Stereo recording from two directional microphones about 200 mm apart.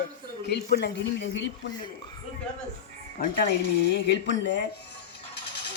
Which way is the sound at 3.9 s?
60° left (ahead or behind).